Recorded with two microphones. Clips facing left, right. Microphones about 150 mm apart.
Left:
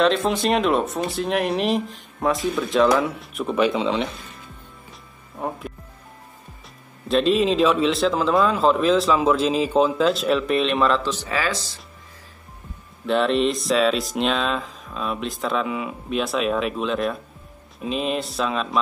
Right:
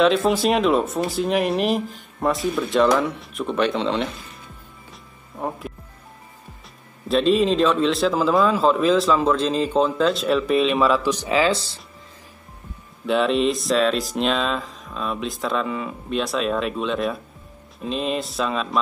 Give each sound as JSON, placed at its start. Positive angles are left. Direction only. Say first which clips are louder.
{"t": 0.0, "sound": "a man's voice", "louder": "right 2 dB", "side_deg": 0}
{"t": 7.1, "sound": "a man's voice", "louder": "right 1 dB", "side_deg": 0}
{"t": 13.0, "sound": "a man's voice", "louder": "even", "side_deg": 0}